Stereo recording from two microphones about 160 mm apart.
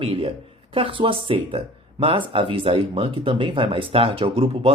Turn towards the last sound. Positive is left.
turn(degrees=-35)  # may be behind; listen again after turning